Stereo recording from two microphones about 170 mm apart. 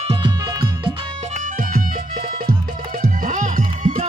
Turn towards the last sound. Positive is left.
turn(degrees=-45)  # may be behind; listen again after turning